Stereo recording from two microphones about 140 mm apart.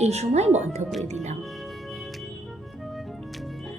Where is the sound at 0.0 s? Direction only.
50° right (ahead or behind).